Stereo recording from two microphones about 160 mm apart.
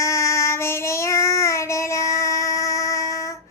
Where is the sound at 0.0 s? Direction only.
20° left (ahead or behind).